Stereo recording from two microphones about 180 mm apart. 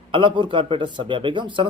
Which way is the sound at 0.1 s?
25° right (ahead or behind).